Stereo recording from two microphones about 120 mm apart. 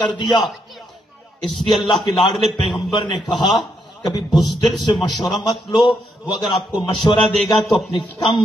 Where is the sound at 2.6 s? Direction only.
40° left (ahead or behind).